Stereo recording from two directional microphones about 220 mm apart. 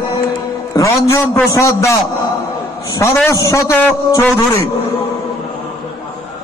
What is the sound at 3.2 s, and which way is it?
A man's voice, 15° left (ahead or behind).